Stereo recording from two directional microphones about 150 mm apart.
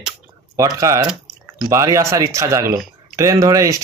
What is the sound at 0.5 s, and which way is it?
Speech, 20° right (ahead or behind).